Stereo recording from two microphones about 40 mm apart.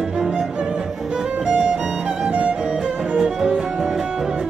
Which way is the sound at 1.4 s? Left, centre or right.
Right.